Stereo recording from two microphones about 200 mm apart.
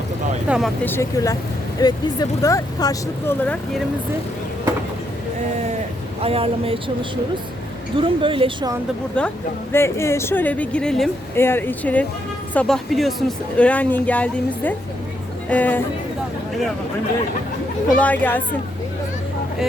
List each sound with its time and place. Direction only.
0.4 s speech: 5° right (ahead or behind)
0.9 s speech: 15° left (ahead or behind)
3.4 s speech: 5° left (ahead or behind)
6.2 s speech: 30° right (ahead or behind)
7.9 s speech: 25° right (ahead or behind)
9.7 s speech: 15° left (ahead or behind)
17.9 s speech: 5° left (ahead or behind)